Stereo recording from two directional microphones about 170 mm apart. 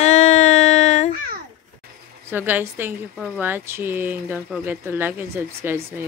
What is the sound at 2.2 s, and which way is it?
A woman's voice, 10° right (ahead or behind).